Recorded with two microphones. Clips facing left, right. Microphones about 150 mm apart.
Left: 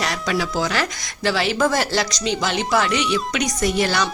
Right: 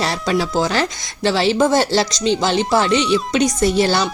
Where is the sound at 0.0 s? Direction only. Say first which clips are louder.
Right 4 dB; 30° right (ahead or behind).